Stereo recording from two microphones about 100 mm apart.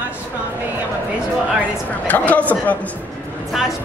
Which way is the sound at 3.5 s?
Centre (ahead or behind).